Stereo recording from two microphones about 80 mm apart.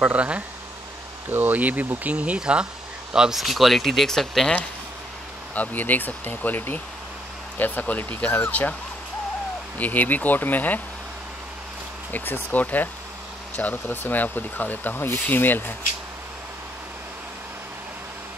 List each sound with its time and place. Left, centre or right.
0.0 s speech: centre
5.5 s speech: centre
9.8 s speech: left
12.1 s speech: left